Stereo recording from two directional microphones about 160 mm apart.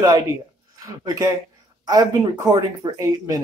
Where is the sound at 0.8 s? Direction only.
20° right (ahead or behind).